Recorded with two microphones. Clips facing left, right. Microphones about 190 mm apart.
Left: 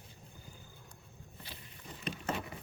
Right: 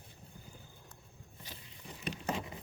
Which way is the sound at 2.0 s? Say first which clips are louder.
Even; 15° right (ahead or behind).